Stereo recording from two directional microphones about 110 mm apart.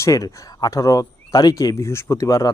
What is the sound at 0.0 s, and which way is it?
Speech, 30° left (ahead or behind).